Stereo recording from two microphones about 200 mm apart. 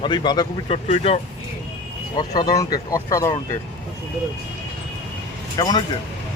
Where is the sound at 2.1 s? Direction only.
20° left (ahead or behind).